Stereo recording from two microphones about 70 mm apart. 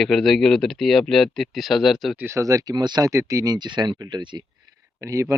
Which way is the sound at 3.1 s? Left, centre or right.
Right.